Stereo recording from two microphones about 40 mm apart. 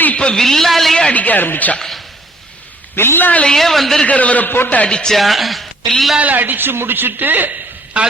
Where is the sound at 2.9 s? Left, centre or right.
Left.